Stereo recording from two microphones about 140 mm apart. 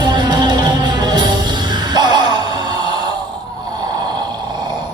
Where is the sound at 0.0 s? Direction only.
30° right (ahead or behind).